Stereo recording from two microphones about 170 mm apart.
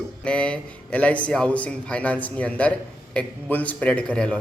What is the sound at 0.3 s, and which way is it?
Speech, 5° left (ahead or behind).